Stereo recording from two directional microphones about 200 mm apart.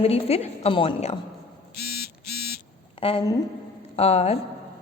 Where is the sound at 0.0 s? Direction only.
30° left (ahead or behind).